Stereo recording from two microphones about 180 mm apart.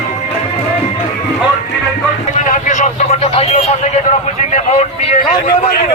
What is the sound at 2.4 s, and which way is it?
Vehicle, 45° left (ahead or behind).